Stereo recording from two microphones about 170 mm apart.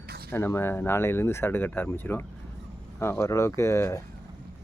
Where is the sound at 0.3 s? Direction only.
15° left (ahead or behind).